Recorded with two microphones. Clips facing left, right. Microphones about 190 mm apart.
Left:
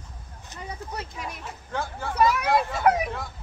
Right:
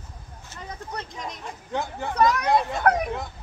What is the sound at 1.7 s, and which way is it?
Dog, 20° right (ahead or behind).